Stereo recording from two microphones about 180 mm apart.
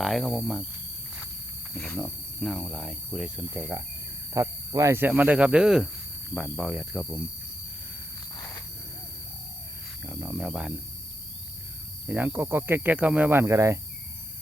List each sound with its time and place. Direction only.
0.0 s speech: centre (ahead or behind)
1.7 s speech: 5° left (ahead or behind)
8.4 s a sound: 20° left (ahead or behind)
10.0 s speech: 10° right (ahead or behind)
12.0 s speech: 10° right (ahead or behind)